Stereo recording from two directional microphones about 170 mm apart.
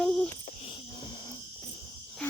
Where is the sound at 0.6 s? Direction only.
25° left (ahead or behind).